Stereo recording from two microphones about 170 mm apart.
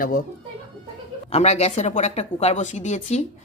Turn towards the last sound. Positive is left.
turn(degrees=40)  # may be behind; listen again after turning